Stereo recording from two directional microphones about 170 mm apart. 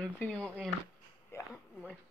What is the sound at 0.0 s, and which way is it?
Speech, 5° left (ahead or behind).